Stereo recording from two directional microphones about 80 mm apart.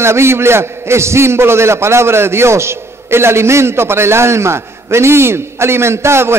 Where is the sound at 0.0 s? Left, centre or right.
Right.